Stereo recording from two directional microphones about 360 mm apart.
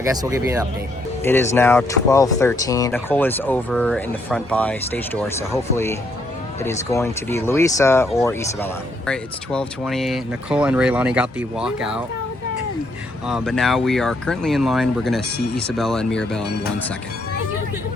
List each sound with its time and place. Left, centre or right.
0.0 s speech: centre
1.2 s speech: centre
13.2 s speech: centre